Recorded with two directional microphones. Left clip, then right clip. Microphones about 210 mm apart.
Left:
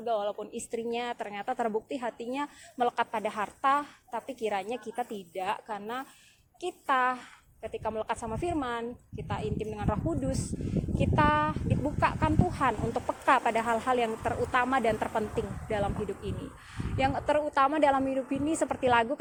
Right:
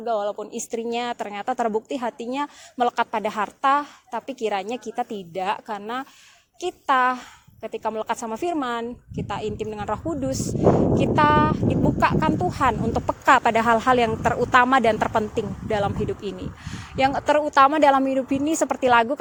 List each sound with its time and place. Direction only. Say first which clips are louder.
0.0 s a woman's voice: right 6 dB; 40° right (ahead or behind)